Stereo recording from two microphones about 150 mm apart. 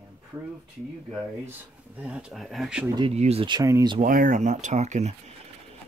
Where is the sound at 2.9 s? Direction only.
40° right (ahead or behind).